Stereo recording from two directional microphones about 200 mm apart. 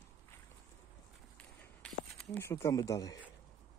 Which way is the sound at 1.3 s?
5° left (ahead or behind).